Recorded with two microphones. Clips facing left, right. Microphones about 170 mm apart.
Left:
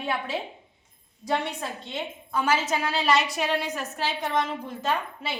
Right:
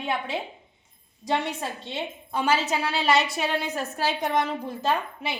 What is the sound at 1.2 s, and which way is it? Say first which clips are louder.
A woman's voice: right 1 dB; 25° right (ahead or behind).